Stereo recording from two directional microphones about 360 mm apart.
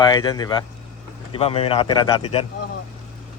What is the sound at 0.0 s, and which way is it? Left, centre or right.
A man's voice, centre.